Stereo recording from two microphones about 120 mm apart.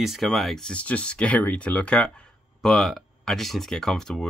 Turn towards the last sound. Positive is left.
turn(degrees=5)  # may be behind; listen again after turning